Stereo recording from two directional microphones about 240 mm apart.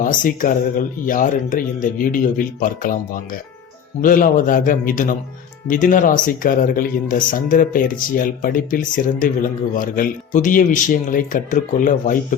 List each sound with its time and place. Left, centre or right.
0.0 s speech: left
4.0 s speech: left